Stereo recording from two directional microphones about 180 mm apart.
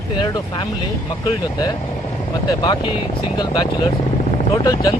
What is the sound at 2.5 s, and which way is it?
Speech, 25° left (ahead or behind).